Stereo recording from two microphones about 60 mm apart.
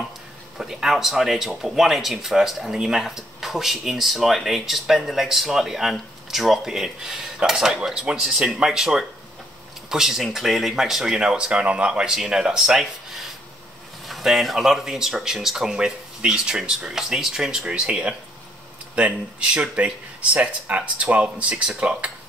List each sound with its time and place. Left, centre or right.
0.6 s speech: centre